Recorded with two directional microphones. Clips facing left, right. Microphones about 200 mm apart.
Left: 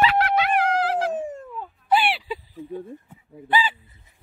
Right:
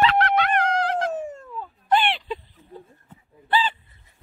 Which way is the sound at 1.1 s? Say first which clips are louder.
Left 2 dB; 15° left (ahead or behind).